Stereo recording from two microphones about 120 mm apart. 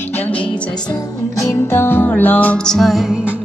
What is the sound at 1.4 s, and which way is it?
Music, 20° left (ahead or behind).